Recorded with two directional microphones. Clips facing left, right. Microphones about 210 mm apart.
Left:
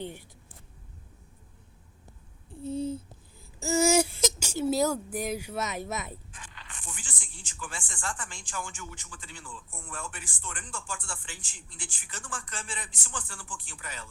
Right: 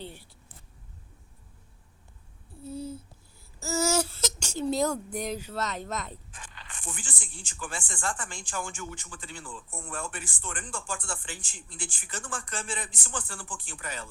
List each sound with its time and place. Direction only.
0.0 s speech: 15° left (ahead or behind)
2.6 s a sound: 20° left (ahead or behind)
6.7 s speech: 50° right (ahead or behind)